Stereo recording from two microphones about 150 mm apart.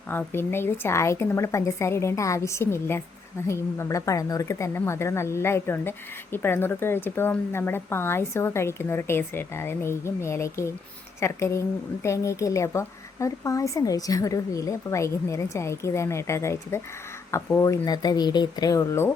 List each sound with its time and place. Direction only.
0.1 s speech: 15° left (ahead or behind)